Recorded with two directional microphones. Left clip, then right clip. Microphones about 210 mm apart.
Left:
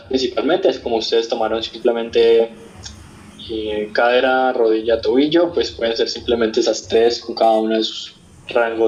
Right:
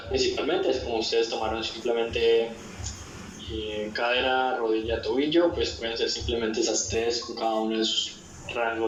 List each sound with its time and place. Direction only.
0.1 s speech: 50° left (ahead or behind)
3.5 s speech: 50° left (ahead or behind)